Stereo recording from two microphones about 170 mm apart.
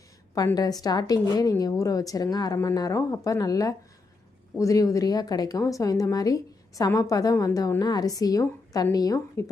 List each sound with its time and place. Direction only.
0.3 s a woman's voice: 20° left (ahead or behind)